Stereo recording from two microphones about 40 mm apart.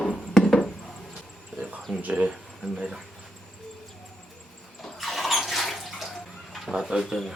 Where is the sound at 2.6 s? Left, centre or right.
Centre.